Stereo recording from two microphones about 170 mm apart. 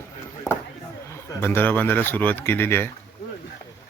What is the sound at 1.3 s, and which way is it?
Speech, 15° left (ahead or behind).